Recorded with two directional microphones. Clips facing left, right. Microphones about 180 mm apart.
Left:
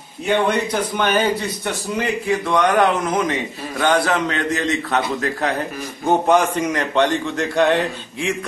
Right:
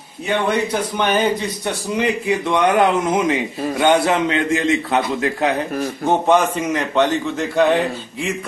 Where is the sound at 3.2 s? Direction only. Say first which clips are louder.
Right 4 dB; 25° right (ahead or behind).